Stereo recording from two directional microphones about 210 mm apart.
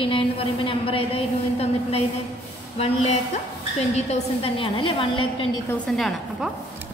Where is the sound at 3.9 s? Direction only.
30° left (ahead or behind).